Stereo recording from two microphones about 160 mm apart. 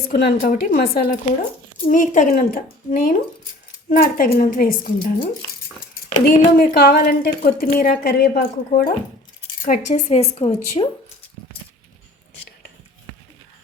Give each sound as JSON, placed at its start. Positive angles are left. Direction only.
{"t": 0.1, "sound": "a woman's voice", "side_deg": 85}
{"t": 0.3, "sound": "speech", "side_deg": 60}
{"t": 6.2, "sound": "a woman's voice", "side_deg": 70}
{"t": 9.6, "sound": "a woman's voice", "side_deg": 50}